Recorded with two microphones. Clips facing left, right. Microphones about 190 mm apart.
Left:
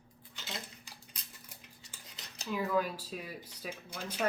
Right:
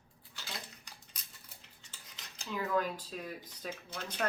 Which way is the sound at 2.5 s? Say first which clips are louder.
Left 1 dB; 10° left (ahead or behind).